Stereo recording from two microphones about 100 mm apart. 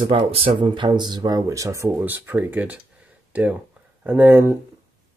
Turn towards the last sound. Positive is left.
turn(degrees=-20)  # may be behind; listen again after turning